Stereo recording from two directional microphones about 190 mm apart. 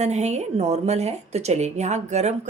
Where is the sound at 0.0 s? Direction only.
35° right (ahead or behind).